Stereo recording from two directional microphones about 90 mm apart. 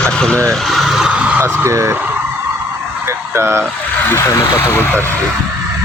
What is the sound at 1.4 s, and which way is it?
Speech, 25° right (ahead or behind).